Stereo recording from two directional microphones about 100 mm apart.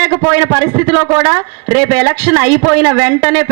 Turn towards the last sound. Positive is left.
turn(degrees=-20)  # may be behind; listen again after turning